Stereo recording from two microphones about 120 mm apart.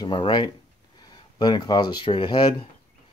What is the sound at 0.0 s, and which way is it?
Speech, 40° left (ahead or behind).